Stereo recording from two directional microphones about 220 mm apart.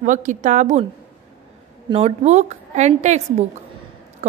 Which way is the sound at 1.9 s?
25° right (ahead or behind).